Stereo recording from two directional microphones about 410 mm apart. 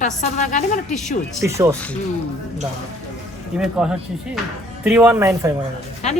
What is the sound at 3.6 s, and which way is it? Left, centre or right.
Speech, centre.